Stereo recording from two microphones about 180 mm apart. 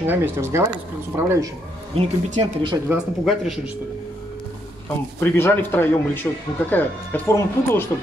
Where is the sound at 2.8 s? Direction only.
5° right (ahead or behind).